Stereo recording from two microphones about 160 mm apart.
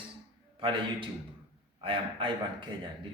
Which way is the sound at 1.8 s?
30° right (ahead or behind).